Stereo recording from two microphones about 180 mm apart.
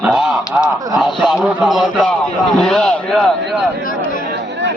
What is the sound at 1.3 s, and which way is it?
Speech, centre (ahead or behind).